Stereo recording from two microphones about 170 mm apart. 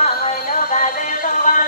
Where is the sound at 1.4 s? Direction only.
50° left (ahead or behind).